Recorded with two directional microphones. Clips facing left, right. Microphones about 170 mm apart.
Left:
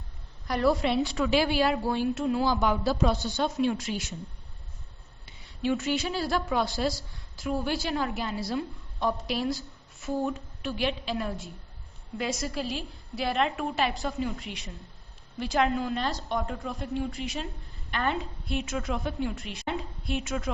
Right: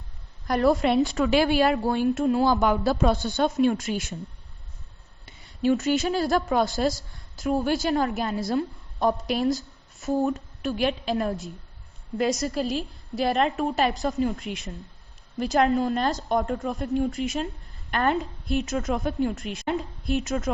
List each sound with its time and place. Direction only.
0.4 s a woman's voice: 50° right (ahead or behind)
5.2 s a woman's voice: 45° right (ahead or behind)